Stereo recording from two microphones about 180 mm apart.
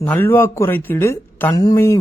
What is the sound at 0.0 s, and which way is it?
A man's voice, 10° left (ahead or behind).